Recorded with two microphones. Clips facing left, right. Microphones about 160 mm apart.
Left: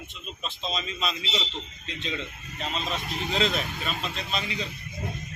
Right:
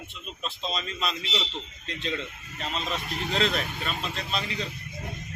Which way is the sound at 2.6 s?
Centre (ahead or behind).